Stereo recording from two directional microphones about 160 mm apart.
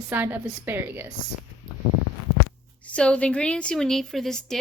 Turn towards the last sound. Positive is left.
turn(degrees=0)  # may be behind; listen again after turning